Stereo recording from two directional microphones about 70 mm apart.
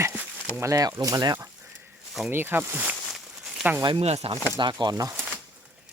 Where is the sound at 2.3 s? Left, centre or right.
Right.